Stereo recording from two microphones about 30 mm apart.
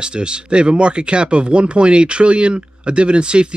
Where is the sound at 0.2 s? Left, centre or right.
Right.